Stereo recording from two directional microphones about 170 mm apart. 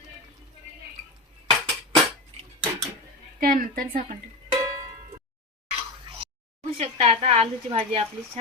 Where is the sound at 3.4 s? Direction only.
55° right (ahead or behind).